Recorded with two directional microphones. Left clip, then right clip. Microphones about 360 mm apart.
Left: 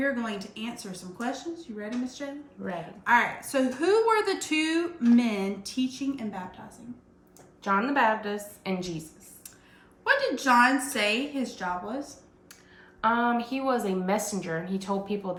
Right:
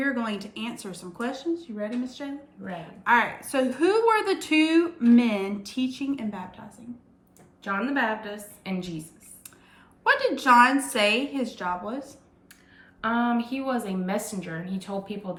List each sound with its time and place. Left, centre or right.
0.0 s a woman's voice: centre
2.6 s a woman's voice: centre
3.0 s a woman's voice: centre
7.6 s a woman's voice: centre
10.0 s a woman's voice: centre
13.0 s a woman's voice: centre